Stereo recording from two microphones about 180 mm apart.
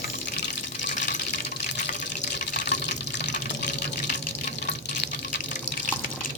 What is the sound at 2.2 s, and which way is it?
Water, 45° left (ahead or behind).